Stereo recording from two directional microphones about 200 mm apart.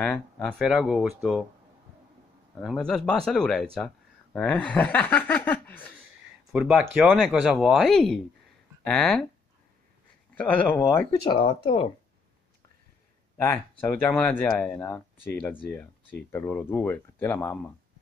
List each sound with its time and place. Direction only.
0.0 s speech: 5° left (ahead or behind)
2.6 s speech: centre (ahead or behind)
10.3 s speech: 5° left (ahead or behind)
11.1 s speech: 25° left (ahead or behind)
13.4 s speech: 10° left (ahead or behind)